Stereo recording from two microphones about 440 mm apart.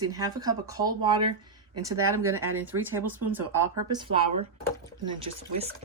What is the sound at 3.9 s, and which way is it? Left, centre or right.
Speech, centre.